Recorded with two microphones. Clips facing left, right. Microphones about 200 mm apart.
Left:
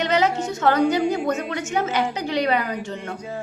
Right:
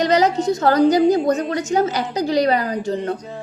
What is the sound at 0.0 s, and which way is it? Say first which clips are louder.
A woman's voice: right 4 dB; 35° right (ahead or behind).